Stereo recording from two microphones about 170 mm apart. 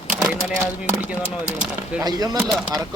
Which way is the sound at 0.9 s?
10° right (ahead or behind).